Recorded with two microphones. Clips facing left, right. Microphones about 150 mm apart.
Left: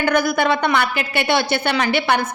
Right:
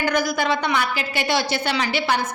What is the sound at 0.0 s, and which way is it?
A woman's voice, 55° left (ahead or behind).